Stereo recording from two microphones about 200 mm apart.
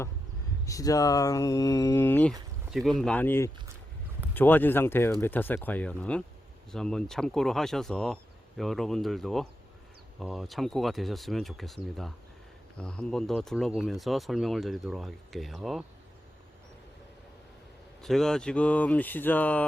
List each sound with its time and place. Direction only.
0.6 s speech: 15° left (ahead or behind)
2.6 s speech: centre (ahead or behind)
18.0 s speech: centre (ahead or behind)